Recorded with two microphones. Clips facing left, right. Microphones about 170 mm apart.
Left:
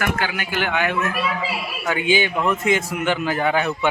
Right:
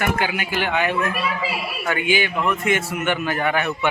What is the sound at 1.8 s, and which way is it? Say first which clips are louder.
A man's voice: left 2 dB; 20° left (ahead or behind).